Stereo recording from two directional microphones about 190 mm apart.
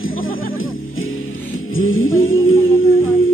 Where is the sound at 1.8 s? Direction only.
90° left.